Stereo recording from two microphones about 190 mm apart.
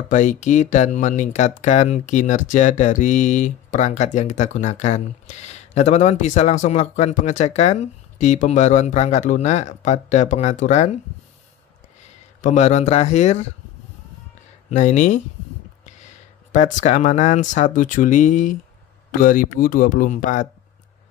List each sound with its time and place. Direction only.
0.1 s speech: 40° left (ahead or behind)
12.4 s speech: 40° left (ahead or behind)
14.7 s speech: 40° left (ahead or behind)
16.5 s speech: 40° left (ahead or behind)